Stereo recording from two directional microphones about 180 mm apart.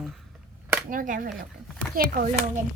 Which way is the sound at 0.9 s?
50° right (ahead or behind).